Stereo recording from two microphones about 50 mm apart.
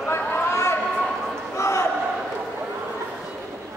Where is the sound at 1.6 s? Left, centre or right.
Left.